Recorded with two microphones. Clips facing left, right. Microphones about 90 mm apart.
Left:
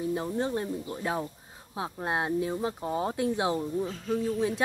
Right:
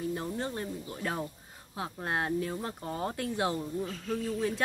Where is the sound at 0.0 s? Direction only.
15° left (ahead or behind).